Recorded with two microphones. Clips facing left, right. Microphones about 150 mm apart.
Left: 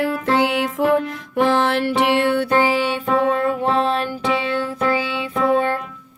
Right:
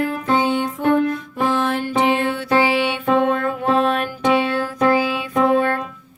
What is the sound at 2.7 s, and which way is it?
Music, 40° left (ahead or behind).